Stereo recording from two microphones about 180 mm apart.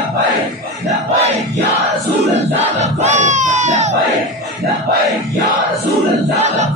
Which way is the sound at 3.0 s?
40° right (ahead or behind).